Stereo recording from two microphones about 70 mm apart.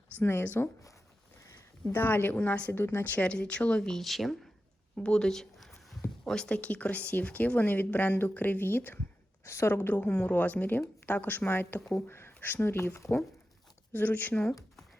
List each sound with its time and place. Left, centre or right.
0.2 s speech: left
1.9 s speech: left; by 4.4 s centre
4.9 s speech: centre; by 13.1 s left
13.9 s speech: left